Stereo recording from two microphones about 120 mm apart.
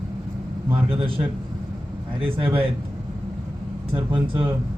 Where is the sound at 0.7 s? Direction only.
50° right (ahead or behind).